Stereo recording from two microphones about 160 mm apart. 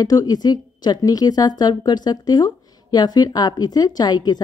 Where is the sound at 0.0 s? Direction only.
25° left (ahead or behind).